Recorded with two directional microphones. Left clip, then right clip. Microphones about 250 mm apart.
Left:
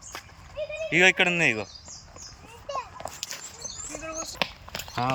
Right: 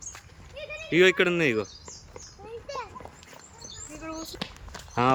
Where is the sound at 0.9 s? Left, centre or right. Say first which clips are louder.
Left 1 dB; centre.